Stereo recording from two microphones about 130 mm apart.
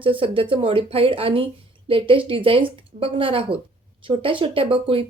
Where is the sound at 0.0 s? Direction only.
40° right (ahead or behind).